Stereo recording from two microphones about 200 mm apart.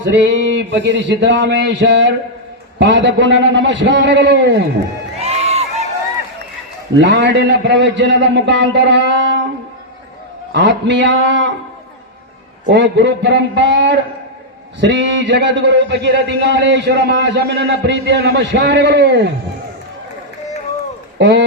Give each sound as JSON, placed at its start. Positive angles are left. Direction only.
{"t": 0.1, "sound": "a man's voice", "side_deg": -65}
{"t": 5.2, "sound": "crowd", "side_deg": -30}
{"t": 7.0, "sound": "a man's voice", "side_deg": -65}
{"t": 10.5, "sound": "a man's voice", "side_deg": -60}
{"t": 12.6, "sound": "a man's voice", "side_deg": -65}
{"t": 21.2, "sound": "speech", "side_deg": -60}